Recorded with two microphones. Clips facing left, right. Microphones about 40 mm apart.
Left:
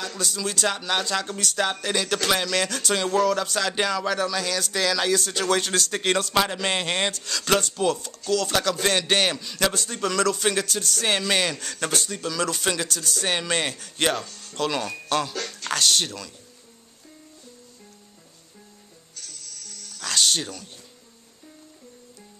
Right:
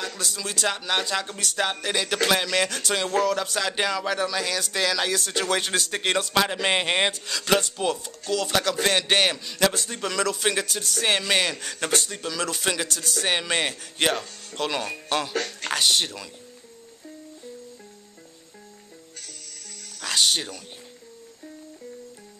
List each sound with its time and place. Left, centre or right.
0.0 s speech: centre
20.0 s speech: centre